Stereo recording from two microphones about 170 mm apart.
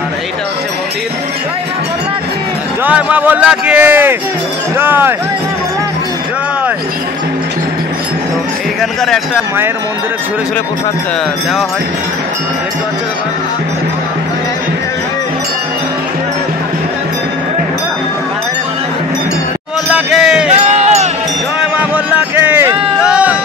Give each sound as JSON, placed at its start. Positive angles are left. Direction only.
{"t": 2.8, "sound": "speech", "side_deg": -10}
{"t": 9.0, "sound": "speech", "side_deg": 0}
{"t": 19.9, "sound": "music", "side_deg": -5}
{"t": 20.6, "sound": "music", "side_deg": -45}
{"t": 21.5, "sound": "a sound", "side_deg": -5}